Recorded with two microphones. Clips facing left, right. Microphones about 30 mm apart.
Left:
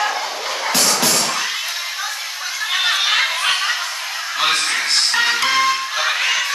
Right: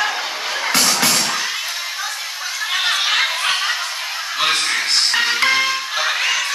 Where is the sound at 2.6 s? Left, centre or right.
Centre.